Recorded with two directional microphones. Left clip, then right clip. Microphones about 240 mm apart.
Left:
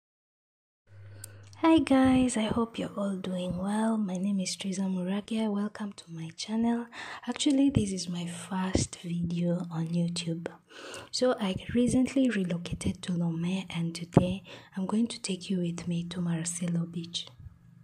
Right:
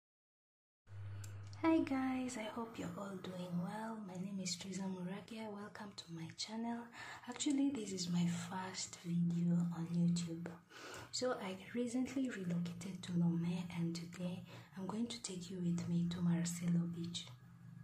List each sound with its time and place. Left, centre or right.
1.6 s speech: left